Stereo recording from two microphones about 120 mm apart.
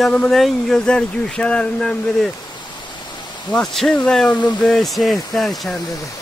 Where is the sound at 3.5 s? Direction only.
5° left (ahead or behind).